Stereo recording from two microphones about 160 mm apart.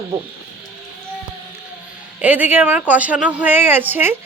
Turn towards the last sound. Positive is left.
turn(degrees=-10)  # may be behind; listen again after turning